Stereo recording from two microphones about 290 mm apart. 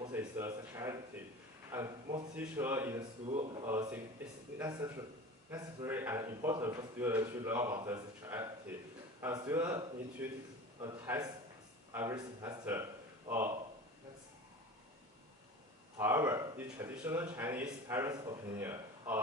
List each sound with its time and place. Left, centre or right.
0.0 s a man's voice: centre
3.3 s speech: centre
3.6 s a man's voice: centre
16.0 s a man's voice: centre